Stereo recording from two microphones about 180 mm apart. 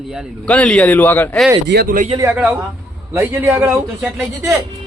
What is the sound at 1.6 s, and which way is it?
Speech, 65° right (ahead or behind).